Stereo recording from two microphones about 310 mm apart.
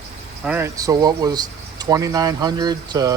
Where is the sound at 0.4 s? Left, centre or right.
Centre.